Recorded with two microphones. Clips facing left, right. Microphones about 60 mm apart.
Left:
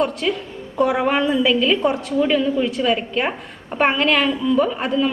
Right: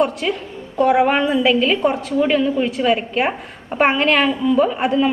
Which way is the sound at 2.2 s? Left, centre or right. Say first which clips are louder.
Right 1 dB; centre.